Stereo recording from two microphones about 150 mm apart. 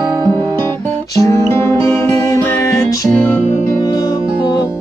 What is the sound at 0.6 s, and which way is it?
Music, 20° left (ahead or behind).